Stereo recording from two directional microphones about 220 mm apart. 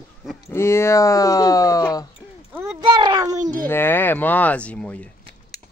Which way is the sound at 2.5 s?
10° right (ahead or behind).